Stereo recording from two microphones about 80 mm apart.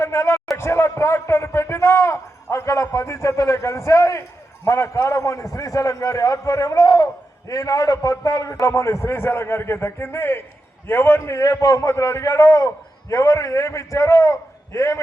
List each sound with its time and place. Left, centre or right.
0.0 s a sound: left
0.5 s a man's voice: left
11.4 s a man's voice: left